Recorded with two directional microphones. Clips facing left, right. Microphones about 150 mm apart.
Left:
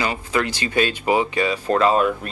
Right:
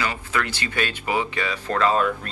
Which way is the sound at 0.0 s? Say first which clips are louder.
Left 4 dB; 25° left (ahead or behind).